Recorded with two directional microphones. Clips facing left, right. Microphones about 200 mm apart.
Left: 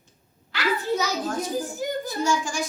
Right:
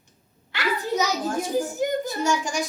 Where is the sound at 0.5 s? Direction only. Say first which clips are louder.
Left 1 dB; 25° right (ahead or behind).